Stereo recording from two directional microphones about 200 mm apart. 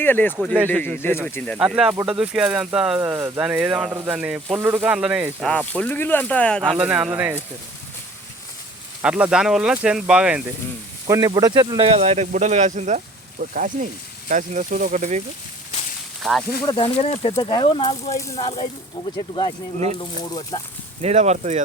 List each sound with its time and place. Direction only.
0.0 s speech: 10° left (ahead or behind)
1.7 s speech: 10° right (ahead or behind)
5.5 s speech: 5° left (ahead or behind)
6.7 s speech: 5° right (ahead or behind)
9.0 s speech: 5° right (ahead or behind)
11.0 s speech: 20° right (ahead or behind); by 15.2 s 40° right (ahead or behind)
16.2 s speech: centre (ahead or behind)
16.6 s speech: 25° left (ahead or behind)
20.0 s speech: 20° left (ahead or behind)
21.0 s speech: 35° right (ahead or behind)